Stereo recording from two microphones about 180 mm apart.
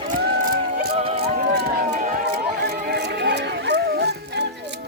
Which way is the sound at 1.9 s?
45° right (ahead or behind).